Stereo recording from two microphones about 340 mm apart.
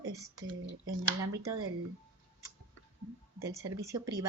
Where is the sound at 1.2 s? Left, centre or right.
Right.